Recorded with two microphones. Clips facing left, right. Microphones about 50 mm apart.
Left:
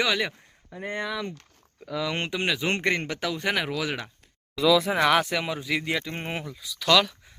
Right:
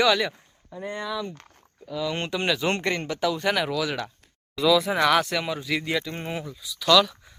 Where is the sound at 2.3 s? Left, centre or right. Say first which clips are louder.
Right 3 dB; centre.